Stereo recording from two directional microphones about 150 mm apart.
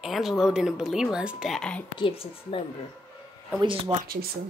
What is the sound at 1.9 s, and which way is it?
Speech, 35° left (ahead or behind).